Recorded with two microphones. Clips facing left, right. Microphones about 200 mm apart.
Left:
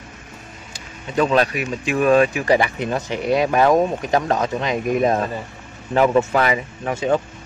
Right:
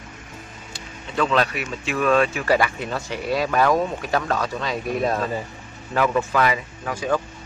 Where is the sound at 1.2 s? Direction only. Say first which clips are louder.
Left 3 dB; 40° left (ahead or behind).